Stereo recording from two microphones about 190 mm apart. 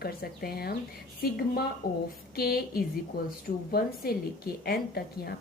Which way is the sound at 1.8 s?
50° left (ahead or behind).